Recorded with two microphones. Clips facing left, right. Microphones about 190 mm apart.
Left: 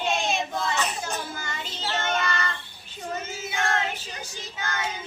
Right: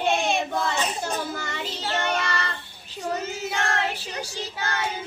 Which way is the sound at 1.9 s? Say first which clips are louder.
Right 1 dB; 35° right (ahead or behind).